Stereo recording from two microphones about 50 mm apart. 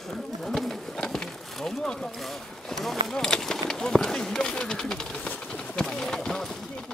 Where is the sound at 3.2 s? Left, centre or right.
Centre.